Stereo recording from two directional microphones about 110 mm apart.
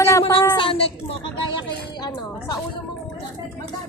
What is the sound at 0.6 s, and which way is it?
Speech, 55° left (ahead or behind).